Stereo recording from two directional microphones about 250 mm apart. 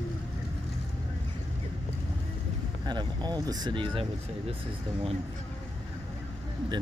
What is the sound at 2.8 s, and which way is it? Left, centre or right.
Speech, centre.